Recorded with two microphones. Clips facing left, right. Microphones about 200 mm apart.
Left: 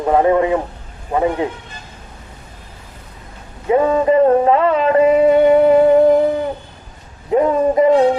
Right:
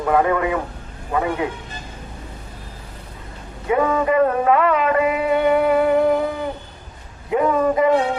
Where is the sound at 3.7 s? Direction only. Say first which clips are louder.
Left 5 dB; 30° left (ahead or behind).